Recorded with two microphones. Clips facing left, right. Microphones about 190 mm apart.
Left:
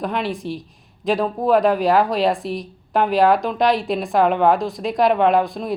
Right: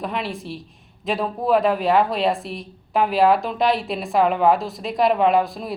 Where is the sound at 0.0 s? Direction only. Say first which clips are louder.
Left 4 dB; centre (ahead or behind).